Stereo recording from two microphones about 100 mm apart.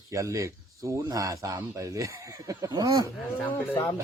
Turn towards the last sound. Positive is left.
turn(degrees=20)  # may be behind; listen again after turning